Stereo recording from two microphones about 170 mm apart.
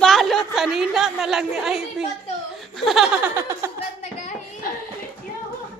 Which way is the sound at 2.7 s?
Centre (ahead or behind).